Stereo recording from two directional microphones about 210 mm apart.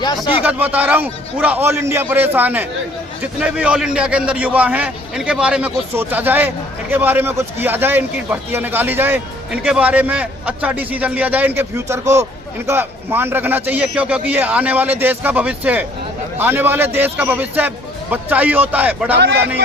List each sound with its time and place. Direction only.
0.4 s a man's voice: 10° right (ahead or behind)
19.1 s speech: 55° right (ahead or behind)